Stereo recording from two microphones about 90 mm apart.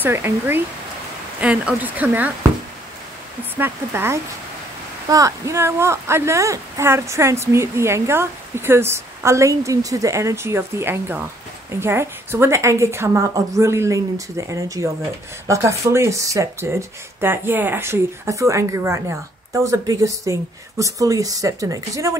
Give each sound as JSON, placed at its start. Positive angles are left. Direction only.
{"t": 0.0, "sound": "speech", "side_deg": -25}
{"t": 1.4, "sound": "speech", "side_deg": -15}
{"t": 3.5, "sound": "speech", "side_deg": -25}
{"t": 5.0, "sound": "speech", "side_deg": -40}
{"t": 17.2, "sound": "speech", "side_deg": -25}